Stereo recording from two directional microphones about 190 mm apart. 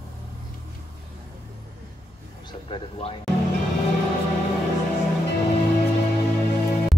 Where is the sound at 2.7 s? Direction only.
30° left (ahead or behind).